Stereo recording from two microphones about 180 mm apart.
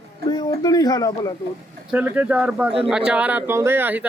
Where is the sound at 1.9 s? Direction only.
10° right (ahead or behind).